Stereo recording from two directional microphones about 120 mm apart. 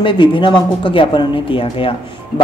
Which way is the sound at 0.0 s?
45° left (ahead or behind).